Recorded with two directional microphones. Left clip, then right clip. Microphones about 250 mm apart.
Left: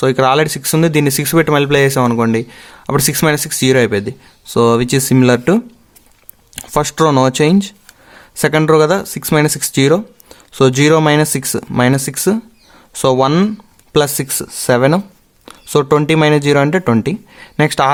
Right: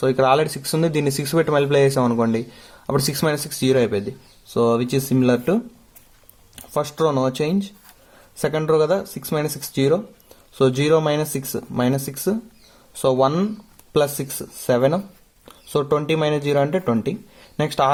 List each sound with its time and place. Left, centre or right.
0.0 s speech: left